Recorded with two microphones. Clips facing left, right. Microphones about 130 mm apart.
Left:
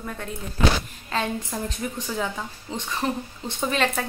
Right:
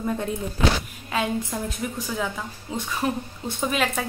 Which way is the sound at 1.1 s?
10° right (ahead or behind).